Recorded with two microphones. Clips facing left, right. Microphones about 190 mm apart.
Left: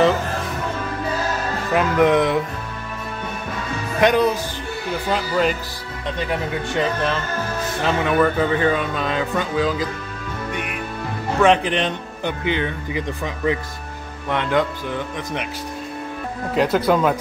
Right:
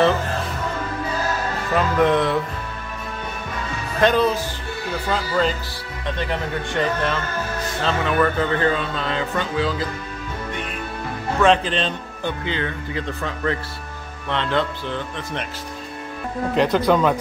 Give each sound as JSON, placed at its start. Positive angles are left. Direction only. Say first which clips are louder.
{"t": 1.7, "sound": "speech", "louder": "left 2 dB", "side_deg": 15}
{"t": 4.0, "sound": "speech", "louder": "left 1 dB", "side_deg": 15}
{"t": 7.8, "sound": "speech", "louder": "left 2 dB", "side_deg": 15}
{"t": 10.5, "sound": "music", "louder": "left 3 dB", "side_deg": 15}
{"t": 11.4, "sound": "speech", "louder": "left 1 dB", "side_deg": 15}
{"t": 16.5, "sound": "speech", "louder": "even", "side_deg": 5}